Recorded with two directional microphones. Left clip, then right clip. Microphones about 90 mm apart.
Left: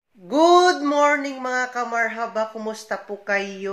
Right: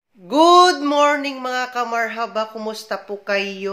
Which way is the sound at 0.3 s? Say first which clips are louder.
Right 3 dB; 20° right (ahead or behind).